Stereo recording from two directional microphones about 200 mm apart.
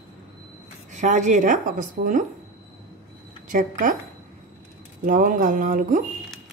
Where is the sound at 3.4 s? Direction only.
40° right (ahead or behind).